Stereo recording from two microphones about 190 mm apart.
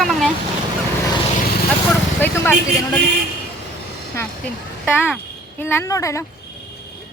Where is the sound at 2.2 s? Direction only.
10° left (ahead or behind).